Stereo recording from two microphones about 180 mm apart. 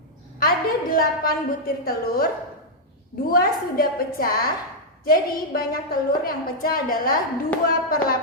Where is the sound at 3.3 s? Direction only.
55° left (ahead or behind).